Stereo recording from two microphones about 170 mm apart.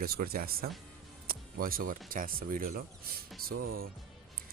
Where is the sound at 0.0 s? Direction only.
60° right (ahead or behind).